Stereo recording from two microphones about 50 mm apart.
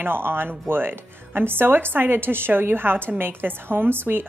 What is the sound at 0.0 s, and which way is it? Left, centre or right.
Speech, right.